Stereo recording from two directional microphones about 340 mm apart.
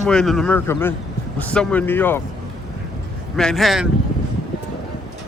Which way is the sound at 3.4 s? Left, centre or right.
Centre.